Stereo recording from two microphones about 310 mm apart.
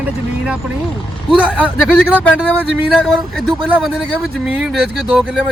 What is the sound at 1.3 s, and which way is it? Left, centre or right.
Speech, centre.